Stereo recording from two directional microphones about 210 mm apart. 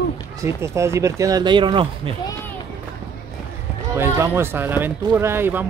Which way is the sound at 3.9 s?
10° right (ahead or behind).